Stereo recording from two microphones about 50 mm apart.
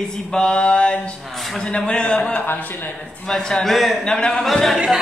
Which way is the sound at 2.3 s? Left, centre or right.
Left.